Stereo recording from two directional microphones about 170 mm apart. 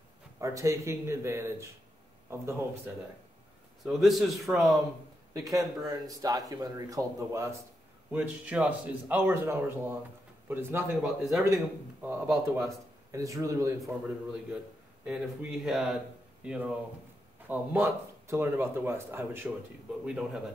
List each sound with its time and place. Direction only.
0.4 s a man's voice: 20° right (ahead or behind)
3.8 s a man's voice: centre (ahead or behind)
5.3 s a man's voice: 20° right (ahead or behind)
11.0 s a man's voice: centre (ahead or behind)
11.4 s a man's voice: 15° right (ahead or behind)
13.7 s a man's voice: centre (ahead or behind)